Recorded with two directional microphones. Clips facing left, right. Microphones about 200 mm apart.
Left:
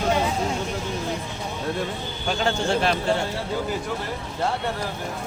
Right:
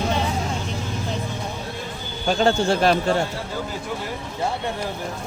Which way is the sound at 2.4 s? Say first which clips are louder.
Right 4 dB; 40° right (ahead or behind).